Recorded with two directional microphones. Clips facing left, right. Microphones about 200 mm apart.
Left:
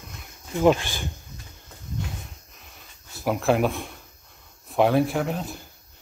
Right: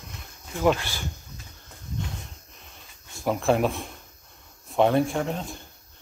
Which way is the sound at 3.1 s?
5° left (ahead or behind).